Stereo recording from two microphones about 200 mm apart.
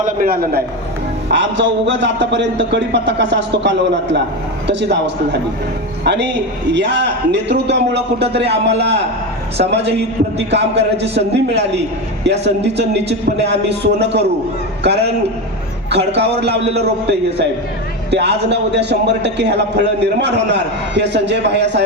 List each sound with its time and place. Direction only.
0.0 s a man's voice: 45° right (ahead or behind)
1.3 s a man's voice: 65° right (ahead or behind)
15.9 s a man's voice: 55° right (ahead or behind)